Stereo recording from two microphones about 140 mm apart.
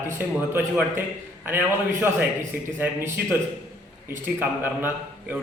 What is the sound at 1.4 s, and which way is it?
A man's voice, 15° right (ahead or behind).